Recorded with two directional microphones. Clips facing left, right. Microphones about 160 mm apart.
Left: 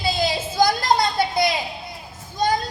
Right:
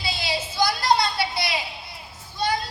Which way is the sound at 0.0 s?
45° left (ahead or behind).